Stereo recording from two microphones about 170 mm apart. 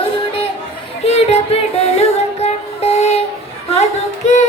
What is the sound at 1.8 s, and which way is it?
Music, 40° left (ahead or behind).